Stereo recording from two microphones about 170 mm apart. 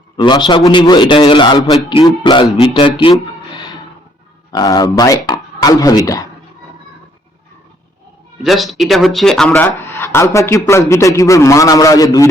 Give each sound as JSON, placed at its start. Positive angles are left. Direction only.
{"t": 0.2, "sound": "a man's voice", "side_deg": 25}
{"t": 8.4, "sound": "a man's voice", "side_deg": 0}